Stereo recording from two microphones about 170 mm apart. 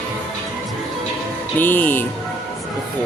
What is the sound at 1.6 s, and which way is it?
Speech, 10° left (ahead or behind).